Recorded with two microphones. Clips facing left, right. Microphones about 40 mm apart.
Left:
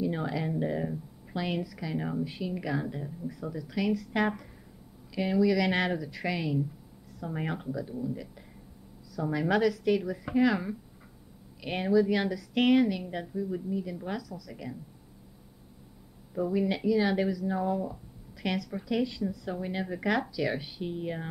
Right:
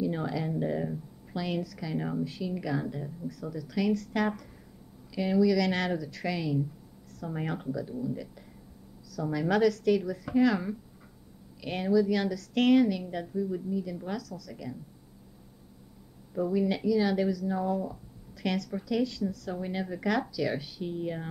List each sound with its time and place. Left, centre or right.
0.0 s a woman's voice: centre
2.2 s speech: centre
16.3 s speech: centre
19.5 s speech: centre